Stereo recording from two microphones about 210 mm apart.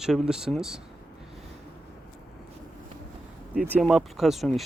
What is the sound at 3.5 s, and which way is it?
Speech, 5° right (ahead or behind).